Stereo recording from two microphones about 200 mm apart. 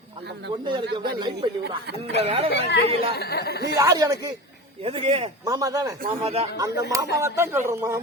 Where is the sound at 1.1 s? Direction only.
20° right (ahead or behind).